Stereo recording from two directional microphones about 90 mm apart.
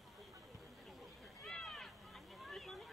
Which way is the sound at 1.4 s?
5° left (ahead or behind).